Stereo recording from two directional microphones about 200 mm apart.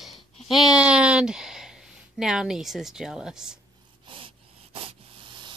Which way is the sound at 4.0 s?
25° right (ahead or behind).